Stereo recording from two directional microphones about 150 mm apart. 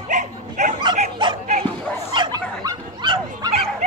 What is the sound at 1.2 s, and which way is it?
Dog, 35° right (ahead or behind).